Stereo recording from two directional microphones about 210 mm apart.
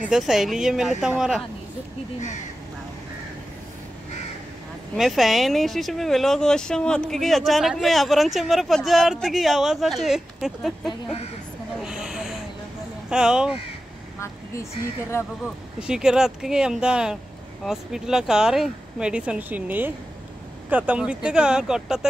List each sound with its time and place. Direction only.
0.0 s speech: centre (ahead or behind)
4.9 s speech: centre (ahead or behind)
10.9 s speech: 30° left (ahead or behind)
11.8 s a sound: 5° right (ahead or behind)
13.1 s speech: 5° right (ahead or behind)
15.4 s speech: 5° right (ahead or behind)